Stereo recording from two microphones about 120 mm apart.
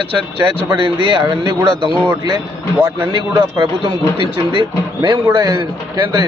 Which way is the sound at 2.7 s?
20° right (ahead or behind).